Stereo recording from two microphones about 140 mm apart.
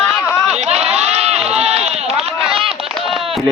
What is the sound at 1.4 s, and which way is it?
Run, 50° right (ahead or behind).